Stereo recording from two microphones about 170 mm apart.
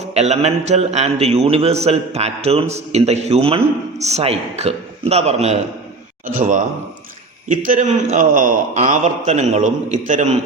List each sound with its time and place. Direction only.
0.1 s a man's voice: 40° right (ahead or behind)